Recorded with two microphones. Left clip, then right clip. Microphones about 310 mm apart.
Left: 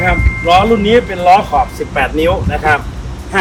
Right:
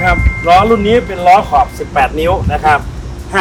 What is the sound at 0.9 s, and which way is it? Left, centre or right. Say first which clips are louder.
Speech: even; right.